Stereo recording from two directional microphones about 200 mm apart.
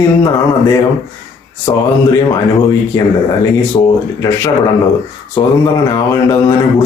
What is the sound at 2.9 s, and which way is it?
Speech, 20° left (ahead or behind).